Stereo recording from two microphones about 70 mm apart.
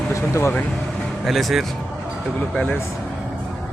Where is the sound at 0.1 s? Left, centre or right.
Left.